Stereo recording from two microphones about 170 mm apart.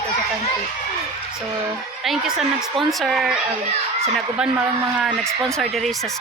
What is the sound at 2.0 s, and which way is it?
Speech, centre (ahead or behind).